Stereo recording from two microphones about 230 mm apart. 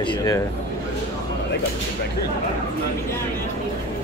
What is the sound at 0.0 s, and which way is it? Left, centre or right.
Speech, centre.